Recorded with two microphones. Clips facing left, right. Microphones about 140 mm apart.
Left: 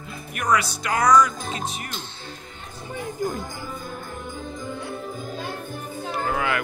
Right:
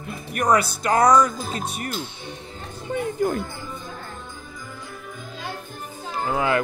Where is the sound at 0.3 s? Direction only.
40° right (ahead or behind).